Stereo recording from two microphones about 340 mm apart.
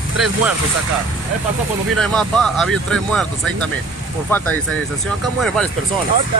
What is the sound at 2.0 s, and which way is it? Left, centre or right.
Speech, centre.